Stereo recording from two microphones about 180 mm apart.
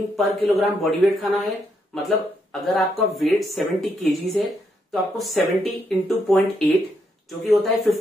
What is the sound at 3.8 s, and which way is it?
Speech, centre (ahead or behind).